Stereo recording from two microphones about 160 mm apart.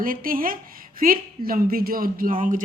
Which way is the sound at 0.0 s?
60° right (ahead or behind).